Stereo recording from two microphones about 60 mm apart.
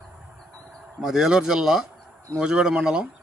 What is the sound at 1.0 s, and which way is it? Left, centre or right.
Speech, centre.